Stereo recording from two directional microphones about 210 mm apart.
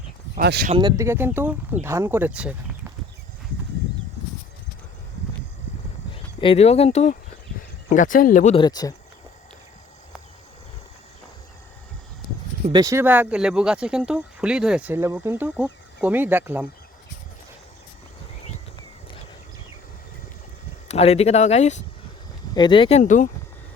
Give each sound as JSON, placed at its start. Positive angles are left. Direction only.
{"t": 0.3, "sound": "speech", "side_deg": -50}
{"t": 0.7, "sound": "speech", "side_deg": -20}
{"t": 6.4, "sound": "speech", "side_deg": 30}
{"t": 8.5, "sound": "speech", "side_deg": 20}
{"t": 12.7, "sound": "speech", "side_deg": -15}
{"t": 20.8, "sound": "speech", "side_deg": 30}
{"t": 22.5, "sound": "speech", "side_deg": 20}